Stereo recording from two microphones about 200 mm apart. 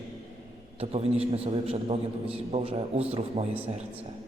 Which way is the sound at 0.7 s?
30° right (ahead or behind).